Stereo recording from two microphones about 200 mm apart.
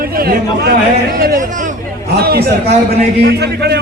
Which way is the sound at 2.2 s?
50° right (ahead or behind).